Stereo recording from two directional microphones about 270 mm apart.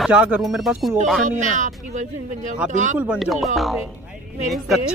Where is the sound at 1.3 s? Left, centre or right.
Right.